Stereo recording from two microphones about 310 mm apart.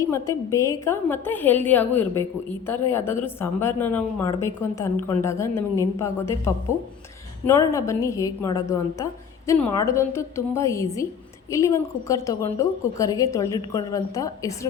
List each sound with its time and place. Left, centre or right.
0.0 s a woman's voice: centre